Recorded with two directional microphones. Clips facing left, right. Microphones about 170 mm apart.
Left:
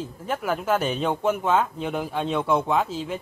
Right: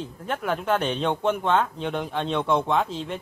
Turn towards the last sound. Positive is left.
turn(degrees=5)  # may be behind; listen again after turning